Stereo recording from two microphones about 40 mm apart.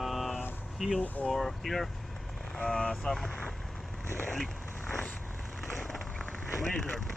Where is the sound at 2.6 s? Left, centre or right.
Centre.